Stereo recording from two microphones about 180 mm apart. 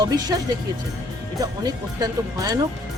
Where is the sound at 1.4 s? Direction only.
20° right (ahead or behind).